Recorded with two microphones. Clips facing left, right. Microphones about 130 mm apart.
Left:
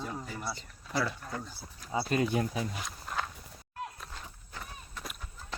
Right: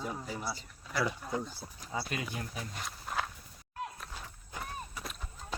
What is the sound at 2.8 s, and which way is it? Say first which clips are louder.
Walk: even; 5° right (ahead or behind).